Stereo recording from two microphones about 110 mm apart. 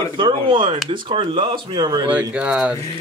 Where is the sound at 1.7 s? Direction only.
40° right (ahead or behind).